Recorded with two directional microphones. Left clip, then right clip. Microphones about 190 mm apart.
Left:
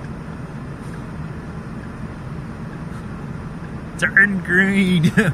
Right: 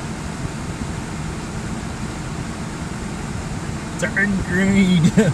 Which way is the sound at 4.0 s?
15° left (ahead or behind).